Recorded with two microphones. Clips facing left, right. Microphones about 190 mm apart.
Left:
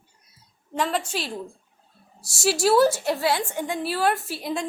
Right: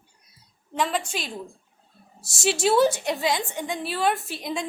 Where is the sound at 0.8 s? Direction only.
5° right (ahead or behind).